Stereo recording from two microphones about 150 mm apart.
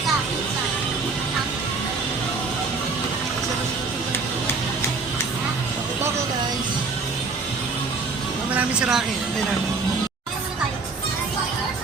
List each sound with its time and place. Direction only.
8.5 s vehicle: 5° right (ahead or behind)